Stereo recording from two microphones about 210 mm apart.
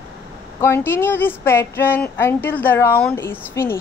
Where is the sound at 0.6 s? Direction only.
10° left (ahead or behind).